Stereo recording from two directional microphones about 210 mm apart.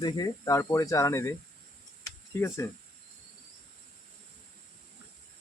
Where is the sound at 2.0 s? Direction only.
15° left (ahead or behind).